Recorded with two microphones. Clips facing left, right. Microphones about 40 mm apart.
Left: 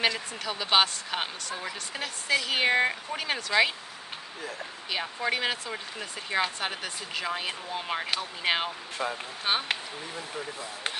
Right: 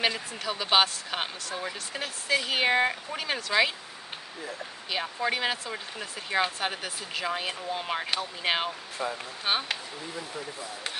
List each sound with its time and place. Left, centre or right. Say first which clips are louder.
0.0 s speech: even; centre
4.9 s speech: even; centre
9.0 s speech: left 1 dB; left
9.4 s speech: even; centre